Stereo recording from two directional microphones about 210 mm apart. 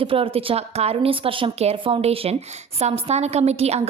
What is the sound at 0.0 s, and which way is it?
A woman's voice, 25° right (ahead or behind).